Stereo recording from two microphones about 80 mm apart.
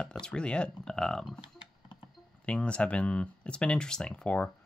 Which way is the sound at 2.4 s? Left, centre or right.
Centre.